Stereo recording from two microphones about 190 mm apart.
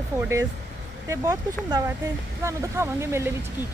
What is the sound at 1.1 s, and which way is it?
Speech, 15° right (ahead or behind).